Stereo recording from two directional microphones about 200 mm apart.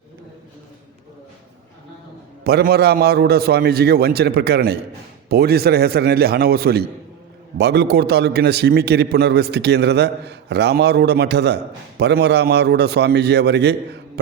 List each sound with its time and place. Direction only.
2.4 s a man's voice: 50° right (ahead or behind)